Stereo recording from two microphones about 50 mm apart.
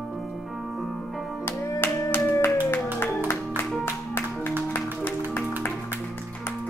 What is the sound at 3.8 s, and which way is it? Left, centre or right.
Music, left.